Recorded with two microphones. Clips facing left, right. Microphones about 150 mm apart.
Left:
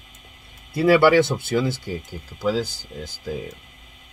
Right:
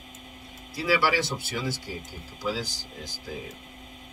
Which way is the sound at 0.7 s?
60° left (ahead or behind).